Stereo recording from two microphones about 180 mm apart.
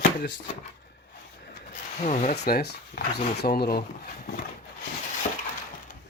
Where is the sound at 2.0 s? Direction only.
40° left (ahead or behind).